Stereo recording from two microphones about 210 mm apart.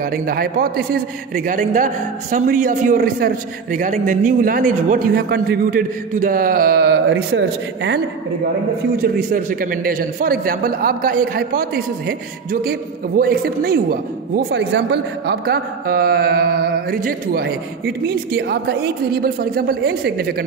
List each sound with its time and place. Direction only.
0.0 s a man's voice: 45° right (ahead or behind)
9.0 s a man's voice: 40° right (ahead or behind)